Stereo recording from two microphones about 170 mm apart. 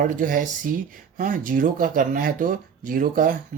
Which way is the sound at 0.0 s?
50° right (ahead or behind).